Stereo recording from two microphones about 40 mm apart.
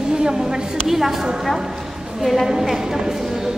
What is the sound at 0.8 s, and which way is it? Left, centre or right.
Speech, centre.